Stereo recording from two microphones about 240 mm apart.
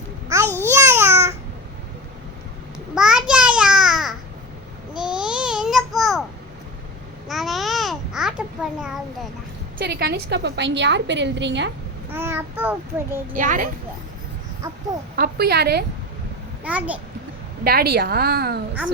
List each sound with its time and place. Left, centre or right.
0.6 s babbling: centre
2.9 s babbling: centre
7.3 s babbling: centre
9.7 s a woman's voice: right
12.1 s child singing: centre
13.3 s a woman's voice: right
15.1 s a woman's voice: right
16.6 s a child's voice: centre
17.6 s a woman's voice: right